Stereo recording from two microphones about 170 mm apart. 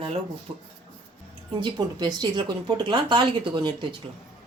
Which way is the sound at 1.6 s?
25° right (ahead or behind).